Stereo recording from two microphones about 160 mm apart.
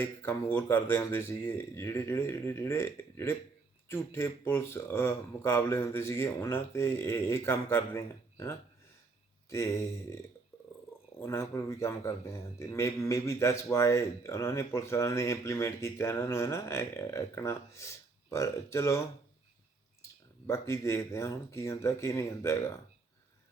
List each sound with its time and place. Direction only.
0.0 s a man's voice: 15° left (ahead or behind)
20.5 s a man's voice: 15° left (ahead or behind)